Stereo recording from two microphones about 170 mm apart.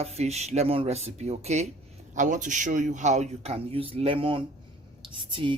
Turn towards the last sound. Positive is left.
turn(degrees=-30)  # may be behind; listen again after turning